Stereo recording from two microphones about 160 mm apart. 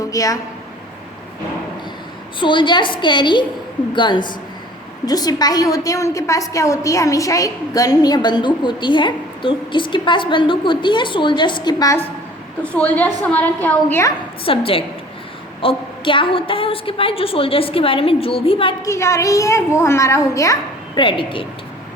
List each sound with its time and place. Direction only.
0.0 s a woman's voice: 20° left (ahead or behind)
2.4 s a woman's voice: 30° left (ahead or behind)
12.6 s a woman's voice: 5° left (ahead or behind)
14.4 s a woman's voice: 35° left (ahead or behind)
18.9 s a woman's voice: 20° left (ahead or behind)